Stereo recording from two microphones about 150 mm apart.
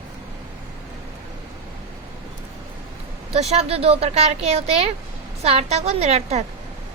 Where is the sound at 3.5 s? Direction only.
45° right (ahead or behind).